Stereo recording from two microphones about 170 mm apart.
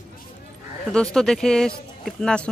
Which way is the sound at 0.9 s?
5° left (ahead or behind).